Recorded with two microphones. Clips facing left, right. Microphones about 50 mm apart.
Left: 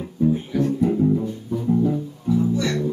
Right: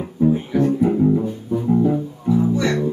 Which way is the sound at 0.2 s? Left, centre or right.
Centre.